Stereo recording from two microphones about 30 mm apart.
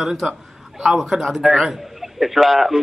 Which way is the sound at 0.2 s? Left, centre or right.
Centre.